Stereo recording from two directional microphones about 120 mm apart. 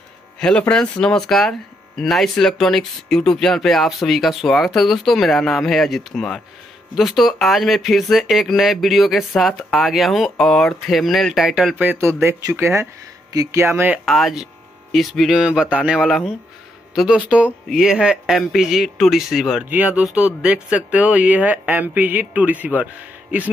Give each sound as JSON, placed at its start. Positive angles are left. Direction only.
{"t": 0.4, "sound": "speech", "side_deg": 5}
{"t": 14.0, "sound": "speech", "side_deg": 0}